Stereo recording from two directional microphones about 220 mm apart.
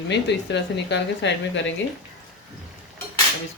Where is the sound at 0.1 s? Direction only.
50° left (ahead or behind).